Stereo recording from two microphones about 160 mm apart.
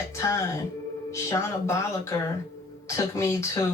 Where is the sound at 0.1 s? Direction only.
20° left (ahead or behind).